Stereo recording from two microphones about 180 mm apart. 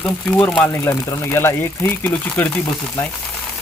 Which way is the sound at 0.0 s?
5° left (ahead or behind).